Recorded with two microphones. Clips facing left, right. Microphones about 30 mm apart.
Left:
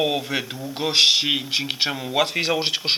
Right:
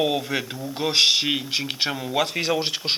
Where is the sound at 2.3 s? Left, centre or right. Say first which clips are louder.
Left 2 dB; left.